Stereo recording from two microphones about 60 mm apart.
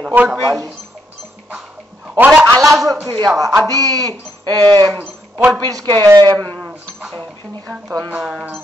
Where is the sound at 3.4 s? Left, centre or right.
Right.